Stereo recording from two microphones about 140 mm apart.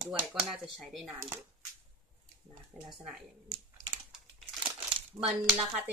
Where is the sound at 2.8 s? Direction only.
5° left (ahead or behind).